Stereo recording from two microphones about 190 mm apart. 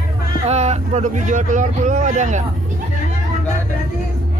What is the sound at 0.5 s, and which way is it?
Speech, 35° right (ahead or behind).